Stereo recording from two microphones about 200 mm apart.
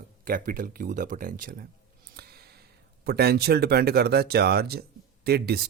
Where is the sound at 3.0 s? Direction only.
50° right (ahead or behind).